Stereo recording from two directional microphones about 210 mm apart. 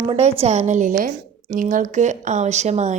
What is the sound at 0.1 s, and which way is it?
A woman's voice, 30° right (ahead or behind).